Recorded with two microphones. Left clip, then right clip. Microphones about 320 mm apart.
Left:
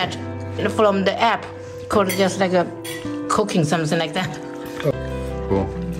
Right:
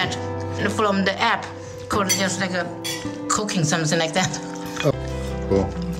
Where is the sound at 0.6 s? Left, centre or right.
Centre.